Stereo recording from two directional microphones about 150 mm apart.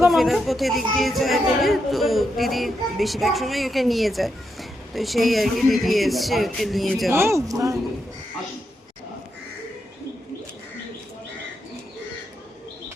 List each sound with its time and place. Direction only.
0.1 s speech: centre (ahead or behind)
7.1 s speech: 15° right (ahead or behind)